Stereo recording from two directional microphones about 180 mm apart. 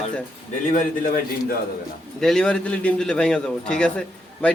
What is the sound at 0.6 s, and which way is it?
Speech, 45° left (ahead or behind).